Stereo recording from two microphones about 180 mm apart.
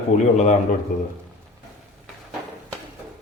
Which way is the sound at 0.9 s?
50° left (ahead or behind).